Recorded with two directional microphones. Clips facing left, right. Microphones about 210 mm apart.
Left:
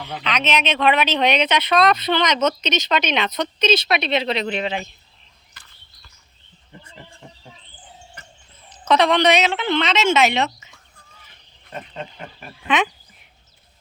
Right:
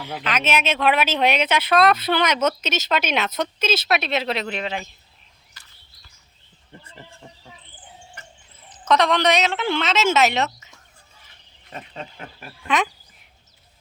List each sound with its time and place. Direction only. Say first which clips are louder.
0.0 s speech: even; 5° right (ahead or behind)
5.6 s bird: left 3 dB; 55° left (ahead or behind)
8.9 s speech: left 2 dB; centre (ahead or behind)
12.6 s speech: left 2 dB; centre (ahead or behind)